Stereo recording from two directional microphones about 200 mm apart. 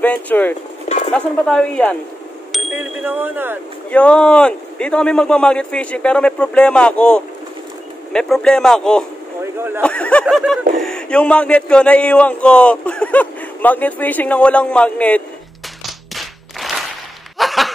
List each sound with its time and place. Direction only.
0.0 s speech: 10° left (ahead or behind)
0.8 s a sound: 30° left (ahead or behind)
1.1 s speech: 5° left (ahead or behind)
2.5 s speech: 5° right (ahead or behind)
3.9 s speech: 5° left (ahead or behind)
9.8 s a sound: 5° left (ahead or behind)
10.2 s speech: centre (ahead or behind)
15.8 s clapping: centre (ahead or behind)
17.4 s a sound: centre (ahead or behind)